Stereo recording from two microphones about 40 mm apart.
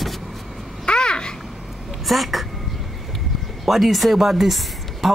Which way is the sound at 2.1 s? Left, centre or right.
Centre.